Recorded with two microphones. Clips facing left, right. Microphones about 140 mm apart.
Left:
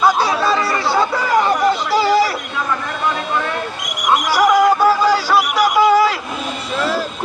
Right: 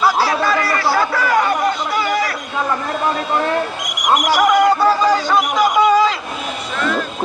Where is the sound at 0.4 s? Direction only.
25° left (ahead or behind).